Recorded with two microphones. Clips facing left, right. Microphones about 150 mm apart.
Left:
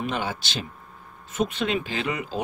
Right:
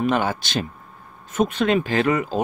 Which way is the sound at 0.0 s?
50° right (ahead or behind).